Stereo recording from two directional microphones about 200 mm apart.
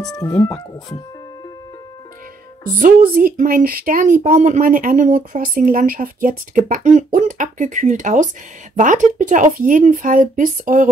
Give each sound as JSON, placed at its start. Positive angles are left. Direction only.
{"t": 0.1, "sound": "speech", "side_deg": 15}
{"t": 2.8, "sound": "speech", "side_deg": -45}